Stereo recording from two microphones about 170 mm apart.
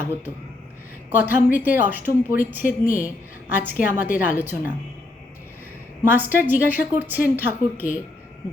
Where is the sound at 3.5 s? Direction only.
10° right (ahead or behind).